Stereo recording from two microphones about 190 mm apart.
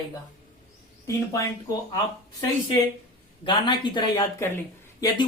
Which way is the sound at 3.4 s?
25° left (ahead or behind).